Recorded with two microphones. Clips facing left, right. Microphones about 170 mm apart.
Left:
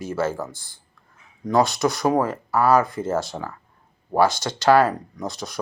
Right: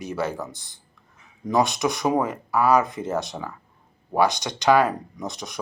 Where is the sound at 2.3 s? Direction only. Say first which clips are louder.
Left 1 dB; 15° right (ahead or behind).